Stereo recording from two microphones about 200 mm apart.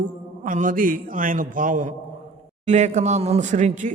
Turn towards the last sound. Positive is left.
turn(degrees=-40)  # may be behind; listen again after turning